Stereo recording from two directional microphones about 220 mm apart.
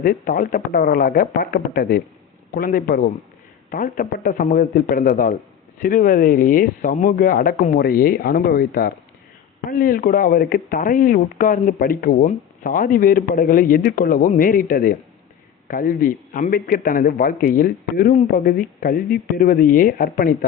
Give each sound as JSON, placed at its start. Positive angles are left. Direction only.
{"t": 0.0, "sound": "speech", "side_deg": 40}